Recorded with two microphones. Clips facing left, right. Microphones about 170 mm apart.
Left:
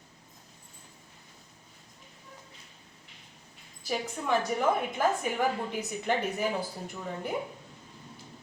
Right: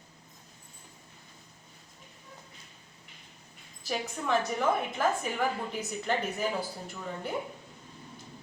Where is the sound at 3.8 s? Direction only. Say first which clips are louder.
Left 1 dB; 10° left (ahead or behind).